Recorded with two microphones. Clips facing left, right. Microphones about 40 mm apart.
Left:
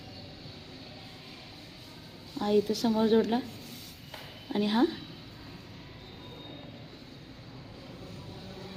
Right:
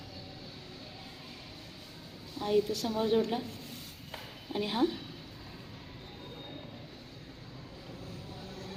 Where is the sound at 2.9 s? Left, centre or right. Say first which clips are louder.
Left 7 dB; left.